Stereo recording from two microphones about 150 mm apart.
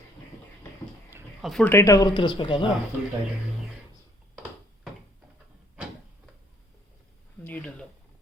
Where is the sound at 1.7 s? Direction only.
20° left (ahead or behind).